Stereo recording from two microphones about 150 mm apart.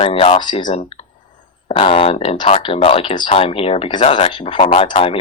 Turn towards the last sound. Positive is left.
turn(degrees=40)  # may be behind; listen again after turning